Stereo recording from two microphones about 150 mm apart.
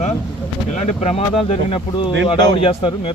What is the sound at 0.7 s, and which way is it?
Speech, 50° left (ahead or behind).